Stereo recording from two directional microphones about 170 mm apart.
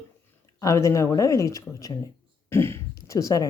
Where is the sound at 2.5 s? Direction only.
15° left (ahead or behind).